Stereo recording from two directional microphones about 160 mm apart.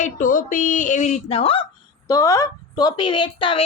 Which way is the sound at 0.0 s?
55° left (ahead or behind).